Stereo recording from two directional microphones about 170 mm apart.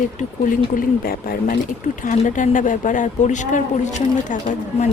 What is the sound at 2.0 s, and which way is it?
Speech, 50° left (ahead or behind).